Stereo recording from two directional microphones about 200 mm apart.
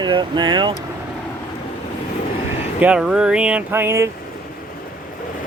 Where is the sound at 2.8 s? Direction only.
5° right (ahead or behind).